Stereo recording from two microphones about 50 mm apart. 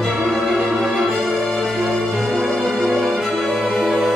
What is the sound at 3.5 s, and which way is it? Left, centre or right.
Music, centre.